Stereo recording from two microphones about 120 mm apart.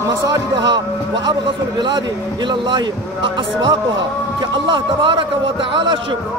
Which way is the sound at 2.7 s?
40° right (ahead or behind).